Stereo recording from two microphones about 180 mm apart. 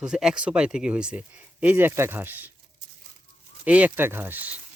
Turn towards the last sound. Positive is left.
turn(degrees=-10)  # may be behind; listen again after turning